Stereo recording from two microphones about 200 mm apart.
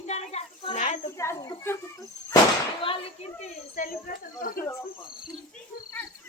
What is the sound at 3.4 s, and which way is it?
Snake, 45° left (ahead or behind).